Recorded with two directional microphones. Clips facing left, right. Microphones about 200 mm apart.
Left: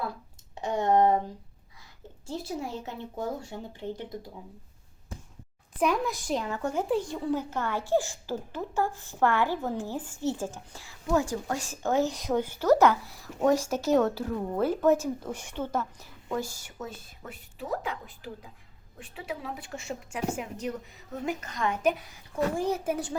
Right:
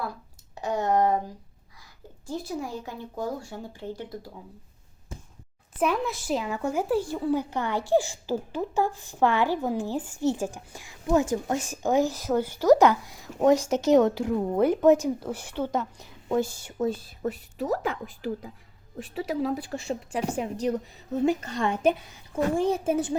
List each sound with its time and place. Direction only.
0.5 s speech: 25° left (ahead or behind)
2.2 s speech: 25° left (ahead or behind)
5.8 s speech: 5° right (ahead or behind)
12.1 s a woman's voice: 5° right (ahead or behind); by 23.1 s 25° right (ahead or behind)